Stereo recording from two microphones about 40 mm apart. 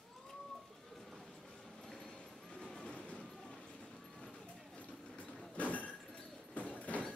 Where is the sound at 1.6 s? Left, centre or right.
Centre.